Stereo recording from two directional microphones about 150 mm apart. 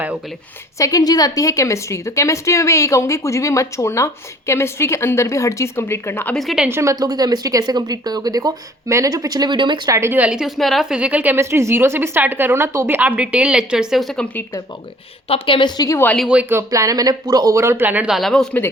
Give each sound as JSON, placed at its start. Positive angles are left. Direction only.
{"t": 0.8, "sound": "a woman's voice", "side_deg": 25}
{"t": 6.3, "sound": "a woman's voice", "side_deg": 0}
{"t": 6.7, "sound": "a woman's voice", "side_deg": -15}
{"t": 10.0, "sound": "a woman's voice", "side_deg": -10}
{"t": 15.3, "sound": "a woman's voice", "side_deg": 35}
{"t": 16.1, "sound": "a woman's voice", "side_deg": -5}